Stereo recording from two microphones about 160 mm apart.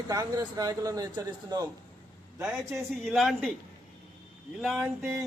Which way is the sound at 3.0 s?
Centre (ahead or behind).